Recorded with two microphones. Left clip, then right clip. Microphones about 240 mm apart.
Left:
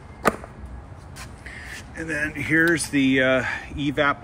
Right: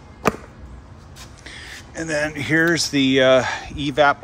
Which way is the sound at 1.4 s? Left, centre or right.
Centre.